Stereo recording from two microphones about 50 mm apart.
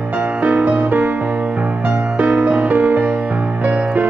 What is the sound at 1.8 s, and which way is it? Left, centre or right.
Music, right.